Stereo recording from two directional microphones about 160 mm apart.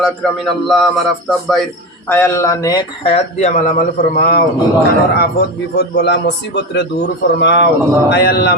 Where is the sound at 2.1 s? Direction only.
15° left (ahead or behind).